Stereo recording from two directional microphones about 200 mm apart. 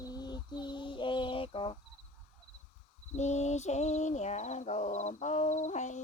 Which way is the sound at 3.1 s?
35° left (ahead or behind).